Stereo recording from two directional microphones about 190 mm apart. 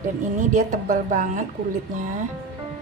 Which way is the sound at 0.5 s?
40° right (ahead or behind).